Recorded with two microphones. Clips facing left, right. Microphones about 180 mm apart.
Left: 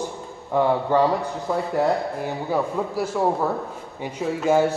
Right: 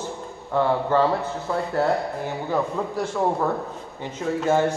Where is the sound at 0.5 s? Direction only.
15° left (ahead or behind).